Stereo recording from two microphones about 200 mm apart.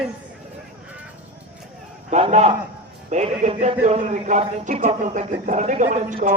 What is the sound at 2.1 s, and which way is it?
A man's voice, 35° right (ahead or behind).